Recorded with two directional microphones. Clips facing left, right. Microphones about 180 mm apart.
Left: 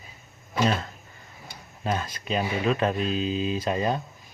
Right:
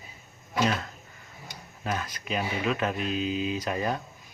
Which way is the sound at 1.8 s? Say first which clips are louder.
Left 3 dB; 25° left (ahead or behind).